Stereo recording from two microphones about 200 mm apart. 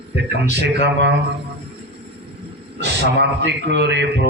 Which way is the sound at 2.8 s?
60° right (ahead or behind).